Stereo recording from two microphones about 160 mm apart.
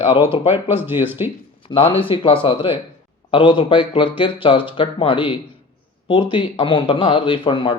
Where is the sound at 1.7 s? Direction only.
35° left (ahead or behind).